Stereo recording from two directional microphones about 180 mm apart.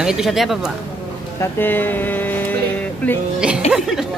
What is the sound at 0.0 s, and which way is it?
Speech, 5° right (ahead or behind).